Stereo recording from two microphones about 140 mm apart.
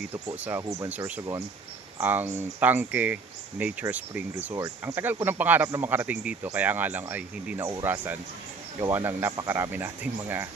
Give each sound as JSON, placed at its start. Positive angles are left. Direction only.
{"t": 0.4, "sound": "speech", "side_deg": -15}
{"t": 4.5, "sound": "speech", "side_deg": -25}
{"t": 4.9, "sound": "speech", "side_deg": -15}